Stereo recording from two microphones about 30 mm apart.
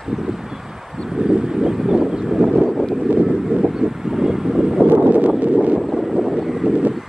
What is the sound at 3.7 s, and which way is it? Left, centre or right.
Vehicle, centre.